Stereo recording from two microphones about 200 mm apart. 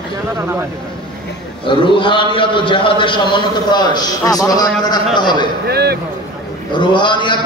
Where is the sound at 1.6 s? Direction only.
25° left (ahead or behind).